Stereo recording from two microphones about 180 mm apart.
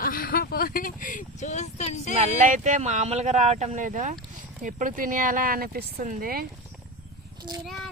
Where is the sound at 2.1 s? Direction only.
40° right (ahead or behind).